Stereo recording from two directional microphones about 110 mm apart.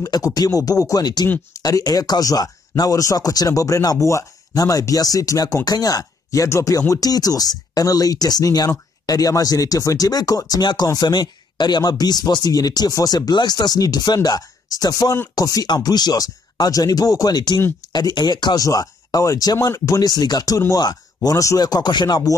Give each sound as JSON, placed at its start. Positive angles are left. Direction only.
{"t": 0.0, "sound": "speech", "side_deg": 35}